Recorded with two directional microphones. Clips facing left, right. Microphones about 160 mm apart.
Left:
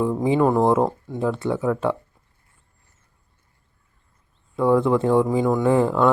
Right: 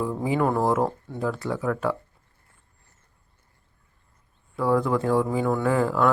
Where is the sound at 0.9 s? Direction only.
15° left (ahead or behind).